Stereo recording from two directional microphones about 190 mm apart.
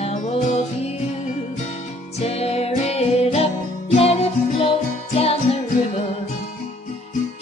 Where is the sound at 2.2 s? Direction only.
35° left (ahead or behind).